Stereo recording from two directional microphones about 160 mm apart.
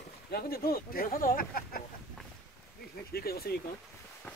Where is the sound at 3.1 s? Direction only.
70° left (ahead or behind).